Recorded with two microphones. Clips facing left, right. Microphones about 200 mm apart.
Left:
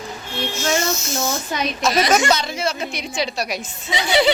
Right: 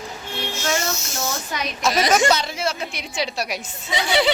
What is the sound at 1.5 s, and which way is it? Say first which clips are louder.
Speech: left 4 dB; 25° left (ahead or behind).